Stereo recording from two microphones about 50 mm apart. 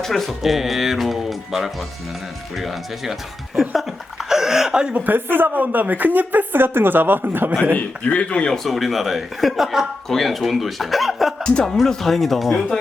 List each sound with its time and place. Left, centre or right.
0.0 s speech: centre
3.8 s a sound: centre
4.9 s a woman's voice: right
7.8 s a man's voice: left
8.4 s speech: centre
11.4 s speech: centre